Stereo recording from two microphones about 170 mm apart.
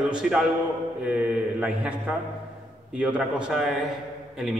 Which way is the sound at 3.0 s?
5° right (ahead or behind).